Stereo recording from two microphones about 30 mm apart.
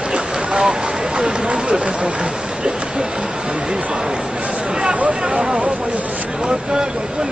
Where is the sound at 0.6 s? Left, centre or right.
Right.